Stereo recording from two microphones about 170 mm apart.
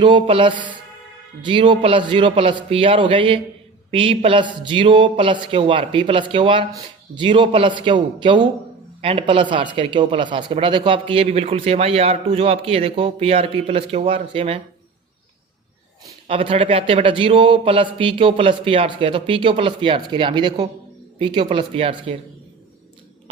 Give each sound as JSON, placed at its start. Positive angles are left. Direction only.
{"t": 0.0, "sound": "a man's voice", "side_deg": -30}
{"t": 16.2, "sound": "a man's voice", "side_deg": -30}